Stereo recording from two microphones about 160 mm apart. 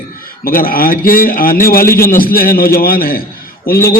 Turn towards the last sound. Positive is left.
turn(degrees=65)  # may be behind; listen again after turning